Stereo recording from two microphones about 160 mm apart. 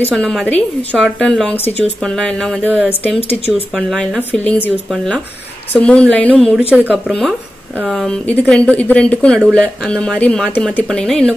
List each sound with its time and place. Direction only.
0.1 s a woman's voice: centre (ahead or behind)
3.2 s speech: 40° left (ahead or behind)
3.7 s a woman's voice: 5° left (ahead or behind)
6.7 s speech: 10° right (ahead or behind)
7.1 s a woman's voice: centre (ahead or behind)